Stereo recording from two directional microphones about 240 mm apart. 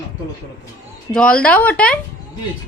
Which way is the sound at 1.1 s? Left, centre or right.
Centre.